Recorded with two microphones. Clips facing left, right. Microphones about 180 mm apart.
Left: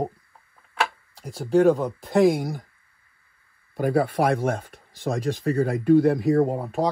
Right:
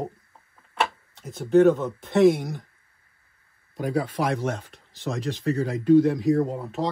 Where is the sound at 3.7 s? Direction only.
60° left (ahead or behind).